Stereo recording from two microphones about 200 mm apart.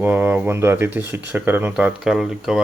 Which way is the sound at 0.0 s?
10° right (ahead or behind).